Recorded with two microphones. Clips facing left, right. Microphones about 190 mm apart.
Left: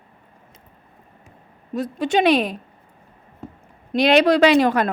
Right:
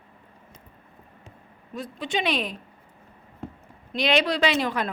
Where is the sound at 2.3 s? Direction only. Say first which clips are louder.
Left 10 dB; 65° left (ahead or behind).